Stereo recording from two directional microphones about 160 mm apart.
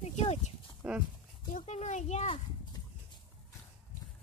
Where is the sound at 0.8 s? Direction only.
10° right (ahead or behind).